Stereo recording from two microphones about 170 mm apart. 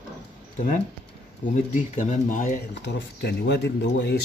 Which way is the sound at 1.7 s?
45° left (ahead or behind).